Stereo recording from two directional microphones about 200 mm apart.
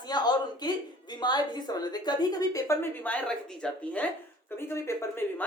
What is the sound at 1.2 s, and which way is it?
Speech, 20° left (ahead or behind).